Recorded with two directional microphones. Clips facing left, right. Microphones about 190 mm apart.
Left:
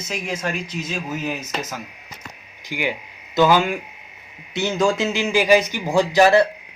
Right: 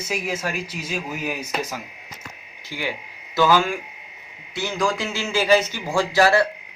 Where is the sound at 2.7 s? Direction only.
15° left (ahead or behind).